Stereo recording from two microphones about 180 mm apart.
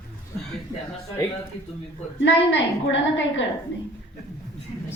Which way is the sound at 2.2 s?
85° left.